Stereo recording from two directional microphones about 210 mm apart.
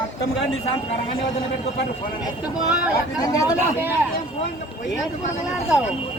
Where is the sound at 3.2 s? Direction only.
15° left (ahead or behind).